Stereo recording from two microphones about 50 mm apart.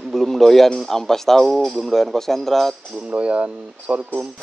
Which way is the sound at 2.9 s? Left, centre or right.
Right.